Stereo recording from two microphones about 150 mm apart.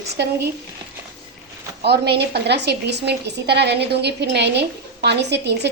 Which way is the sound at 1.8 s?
90° right.